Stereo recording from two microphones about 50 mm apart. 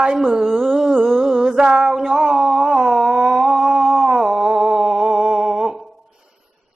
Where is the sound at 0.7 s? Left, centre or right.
Centre.